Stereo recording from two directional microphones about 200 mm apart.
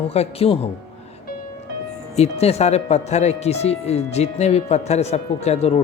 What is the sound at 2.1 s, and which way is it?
Speech, 30° left (ahead or behind).